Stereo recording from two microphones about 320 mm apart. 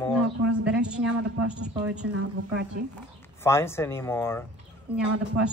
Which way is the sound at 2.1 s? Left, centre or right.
Right.